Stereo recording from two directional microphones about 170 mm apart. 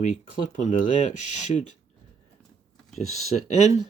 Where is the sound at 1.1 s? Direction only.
45° left (ahead or behind).